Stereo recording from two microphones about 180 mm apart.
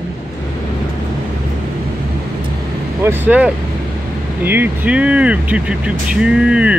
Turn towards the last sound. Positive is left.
turn(degrees=-5)  # may be behind; listen again after turning